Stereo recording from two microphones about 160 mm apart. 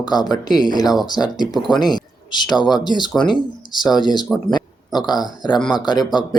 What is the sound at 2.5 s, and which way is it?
Speech, 25° left (ahead or behind).